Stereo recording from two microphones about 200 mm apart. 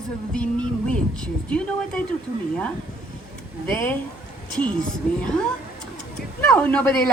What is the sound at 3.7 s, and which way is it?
Speech, 10° left (ahead or behind).